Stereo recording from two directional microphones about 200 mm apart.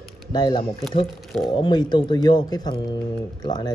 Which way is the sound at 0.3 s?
20° left (ahead or behind).